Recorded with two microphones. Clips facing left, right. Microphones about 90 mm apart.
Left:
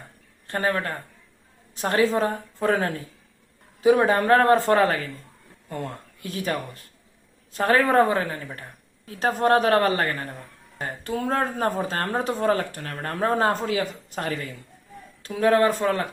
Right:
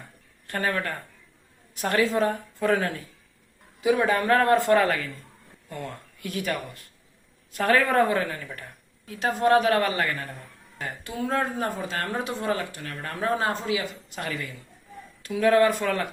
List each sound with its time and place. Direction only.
0.4 s speech: 30° left (ahead or behind)